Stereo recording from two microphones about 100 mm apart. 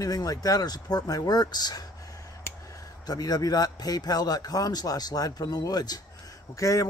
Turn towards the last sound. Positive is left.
turn(degrees=35)  # may be behind; listen again after turning